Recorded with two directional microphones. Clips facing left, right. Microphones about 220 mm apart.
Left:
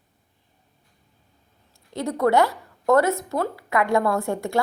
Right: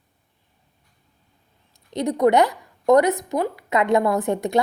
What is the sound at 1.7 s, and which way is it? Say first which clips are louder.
A woman's voice: right 4 dB; 20° right (ahead or behind).